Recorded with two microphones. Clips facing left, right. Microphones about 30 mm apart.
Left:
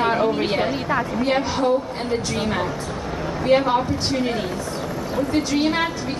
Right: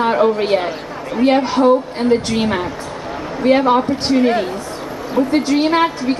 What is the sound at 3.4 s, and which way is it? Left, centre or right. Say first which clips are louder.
Speech: right 5 dB; right.